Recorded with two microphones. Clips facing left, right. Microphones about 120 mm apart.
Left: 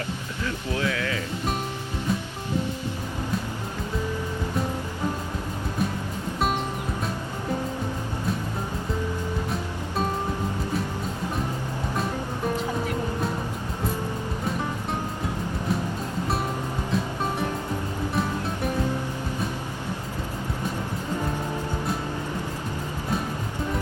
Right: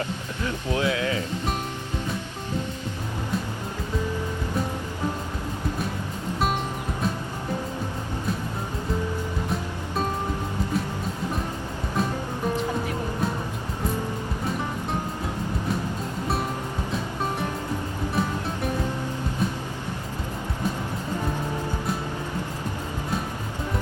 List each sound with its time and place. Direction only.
0.4 s speech: 20° right (ahead or behind)